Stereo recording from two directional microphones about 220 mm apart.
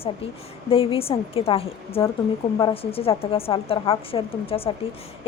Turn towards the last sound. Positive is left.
turn(degrees=25)  # may be behind; listen again after turning